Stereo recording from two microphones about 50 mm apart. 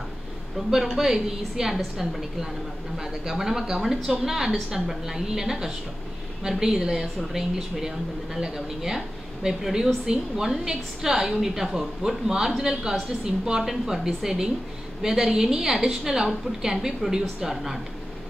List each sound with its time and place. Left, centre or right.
0.6 s a woman's voice: centre
3.0 s a woman's voice: centre
8.4 s a woman's voice: centre